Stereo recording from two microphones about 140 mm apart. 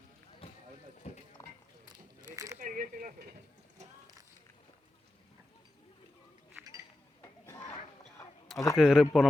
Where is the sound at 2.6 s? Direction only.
75° right (ahead or behind).